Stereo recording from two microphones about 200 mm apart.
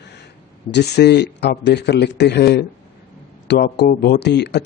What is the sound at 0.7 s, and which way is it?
Speech, 55° left (ahead or behind).